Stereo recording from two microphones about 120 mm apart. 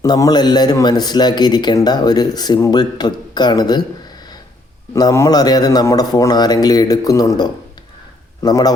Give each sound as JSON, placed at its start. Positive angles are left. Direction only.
{"t": 0.0, "sound": "speech", "side_deg": 35}
{"t": 4.9, "sound": "speech", "side_deg": 30}